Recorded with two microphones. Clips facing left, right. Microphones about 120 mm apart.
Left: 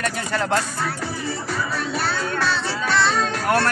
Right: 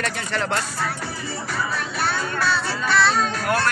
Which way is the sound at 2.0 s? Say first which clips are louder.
Right 2 dB; 10° right (ahead or behind).